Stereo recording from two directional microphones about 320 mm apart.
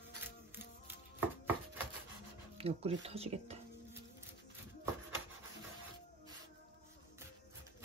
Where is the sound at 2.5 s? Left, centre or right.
Centre.